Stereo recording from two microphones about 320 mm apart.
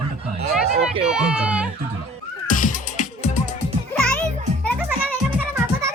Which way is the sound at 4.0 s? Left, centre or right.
Centre.